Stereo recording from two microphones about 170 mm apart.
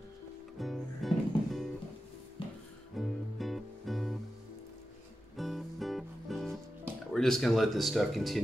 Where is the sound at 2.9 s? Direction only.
Centre (ahead or behind).